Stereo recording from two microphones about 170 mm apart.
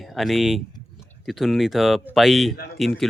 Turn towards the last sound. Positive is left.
turn(degrees=0)  # may be behind; listen again after turning